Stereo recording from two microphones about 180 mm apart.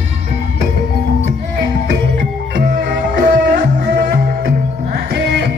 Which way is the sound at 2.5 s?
50° right (ahead or behind).